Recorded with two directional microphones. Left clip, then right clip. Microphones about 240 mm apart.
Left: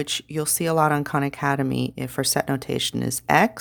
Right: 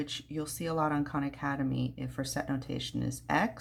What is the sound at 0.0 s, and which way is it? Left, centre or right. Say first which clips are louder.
Speech: left 11 dB; left.